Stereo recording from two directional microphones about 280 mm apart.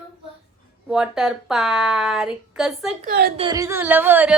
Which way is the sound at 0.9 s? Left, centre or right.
Centre.